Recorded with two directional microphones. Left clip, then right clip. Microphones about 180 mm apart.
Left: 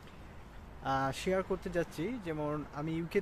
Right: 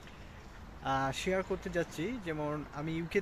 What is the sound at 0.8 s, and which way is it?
Speech, 5° left (ahead or behind).